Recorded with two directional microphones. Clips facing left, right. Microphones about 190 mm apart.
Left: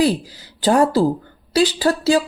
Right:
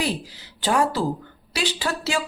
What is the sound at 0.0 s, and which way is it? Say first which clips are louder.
Speech: left 9 dB; 40° left (ahead or behind).